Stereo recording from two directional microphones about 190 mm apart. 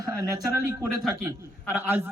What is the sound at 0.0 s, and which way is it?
A man's voice, 20° right (ahead or behind).